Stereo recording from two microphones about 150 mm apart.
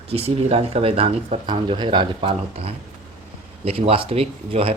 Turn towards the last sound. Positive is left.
turn(degrees=-40)  # may be behind; listen again after turning